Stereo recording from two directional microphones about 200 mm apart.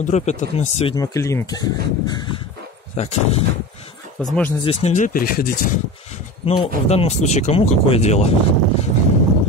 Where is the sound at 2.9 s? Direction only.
35° left (ahead or behind).